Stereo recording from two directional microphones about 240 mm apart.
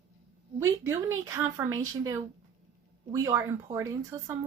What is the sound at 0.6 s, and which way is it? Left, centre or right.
A woman's voice, centre.